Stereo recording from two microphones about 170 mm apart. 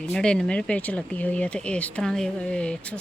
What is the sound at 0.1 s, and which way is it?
Speech, 5° left (ahead or behind).